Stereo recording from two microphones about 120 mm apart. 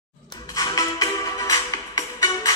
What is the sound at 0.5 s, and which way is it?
Music, 30° left (ahead or behind).